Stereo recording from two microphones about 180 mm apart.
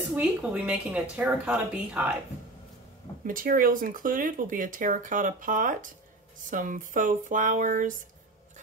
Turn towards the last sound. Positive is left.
turn(degrees=-45)  # may be behind; listen again after turning